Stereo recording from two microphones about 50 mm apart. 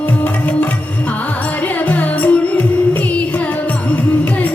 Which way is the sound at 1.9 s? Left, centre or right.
Left.